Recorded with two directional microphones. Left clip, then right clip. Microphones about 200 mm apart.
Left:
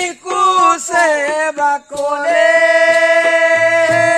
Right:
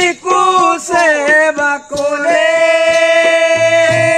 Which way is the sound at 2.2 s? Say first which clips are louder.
Even; 60° left (ahead or behind).